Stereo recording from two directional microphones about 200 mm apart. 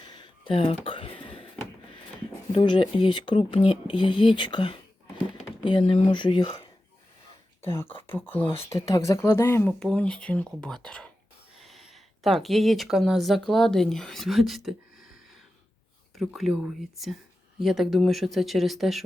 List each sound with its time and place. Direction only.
0.0 s a sound: 20° left (ahead or behind)
1.2 s door: 25° left (ahead or behind)
2.5 s speech: 25° left (ahead or behind)
7.6 s speech: 10° left (ahead or behind)
16.1 s speech: centre (ahead or behind)